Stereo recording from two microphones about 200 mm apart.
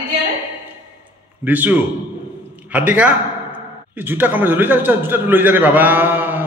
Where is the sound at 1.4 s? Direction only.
10° right (ahead or behind).